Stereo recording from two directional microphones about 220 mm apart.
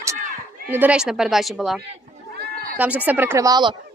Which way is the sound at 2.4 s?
45° right (ahead or behind).